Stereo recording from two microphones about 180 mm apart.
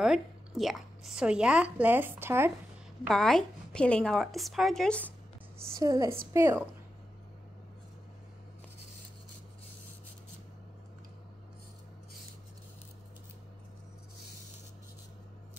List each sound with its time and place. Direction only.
0.6 s speech: centre (ahead or behind)
3.0 s speech: centre (ahead or behind)
5.8 s speech: 20° right (ahead or behind)